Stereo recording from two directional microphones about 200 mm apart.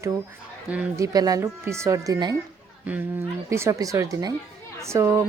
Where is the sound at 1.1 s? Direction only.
20° right (ahead or behind).